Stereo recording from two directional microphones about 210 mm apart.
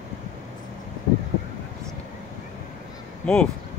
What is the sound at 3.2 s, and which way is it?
Speech, 5° left (ahead or behind).